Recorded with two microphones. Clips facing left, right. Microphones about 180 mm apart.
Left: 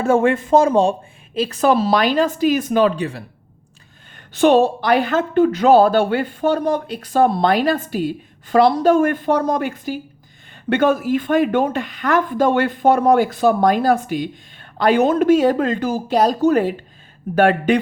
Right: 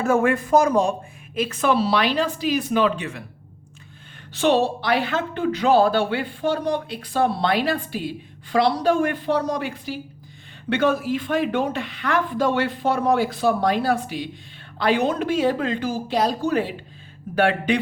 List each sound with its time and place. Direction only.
0.0 s a woman's voice: 25° left (ahead or behind)
4.4 s a woman's voice: 50° left (ahead or behind)